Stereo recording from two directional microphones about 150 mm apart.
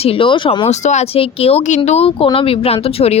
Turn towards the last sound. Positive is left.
turn(degrees=40)  # may be behind; listen again after turning